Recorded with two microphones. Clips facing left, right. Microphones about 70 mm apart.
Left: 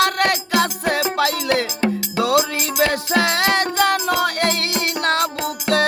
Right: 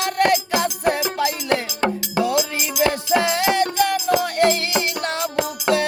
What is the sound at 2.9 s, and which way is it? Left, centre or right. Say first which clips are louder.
Music: even; left.